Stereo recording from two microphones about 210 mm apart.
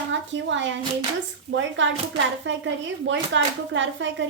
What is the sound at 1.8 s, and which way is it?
A woman's voice, 60° right (ahead or behind).